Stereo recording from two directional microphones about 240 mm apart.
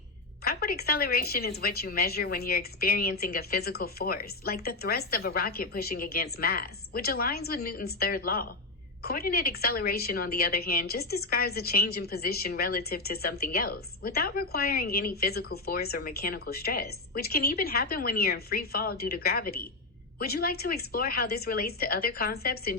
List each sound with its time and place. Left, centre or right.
0.4 s a woman's voice: left